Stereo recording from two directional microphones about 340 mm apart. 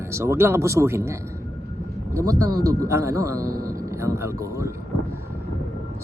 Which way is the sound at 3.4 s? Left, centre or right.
Right.